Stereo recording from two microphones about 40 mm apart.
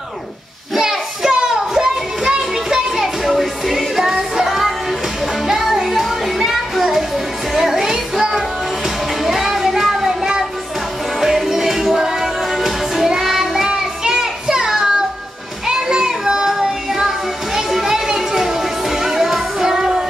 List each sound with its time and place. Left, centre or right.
0.7 s a sound: centre
3.0 s music: centre
13.7 s child singing: centre
17.6 s music: centre